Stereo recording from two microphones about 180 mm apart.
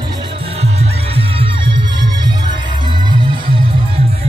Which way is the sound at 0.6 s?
35° right (ahead or behind).